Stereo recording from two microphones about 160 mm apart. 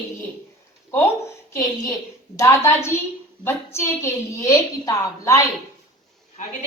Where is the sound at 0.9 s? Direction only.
15° left (ahead or behind).